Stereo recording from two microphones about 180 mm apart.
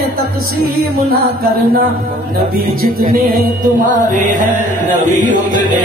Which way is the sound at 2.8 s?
55° right (ahead or behind).